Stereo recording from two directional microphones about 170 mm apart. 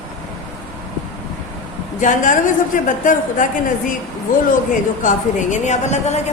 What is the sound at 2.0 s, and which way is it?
A woman's voice, 50° left (ahead or behind).